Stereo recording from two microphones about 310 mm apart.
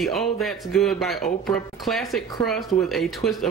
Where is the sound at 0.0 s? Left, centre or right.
Centre.